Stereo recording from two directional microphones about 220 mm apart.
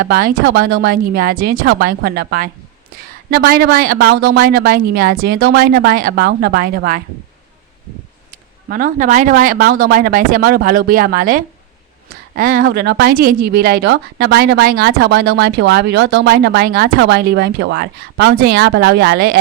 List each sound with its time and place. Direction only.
0.0 s a woman's voice: 40° right (ahead or behind)
1.6 s a woman's voice: 60° right (ahead or behind)
1.9 s a woman's voice: 45° right (ahead or behind)
8.7 s a woman's voice: 35° right (ahead or behind)